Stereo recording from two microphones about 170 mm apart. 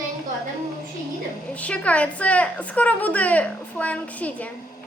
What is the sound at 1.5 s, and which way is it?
A woman's voice, 10° left (ahead or behind).